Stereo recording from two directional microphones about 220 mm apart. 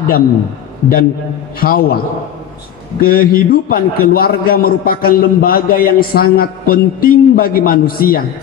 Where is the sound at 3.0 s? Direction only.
40° left (ahead or behind).